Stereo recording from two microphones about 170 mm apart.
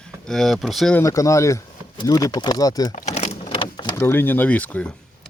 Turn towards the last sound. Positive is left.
turn(degrees=10)  # may be behind; listen again after turning